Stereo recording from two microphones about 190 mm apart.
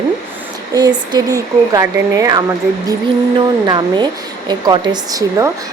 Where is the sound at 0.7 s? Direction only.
20° right (ahead or behind).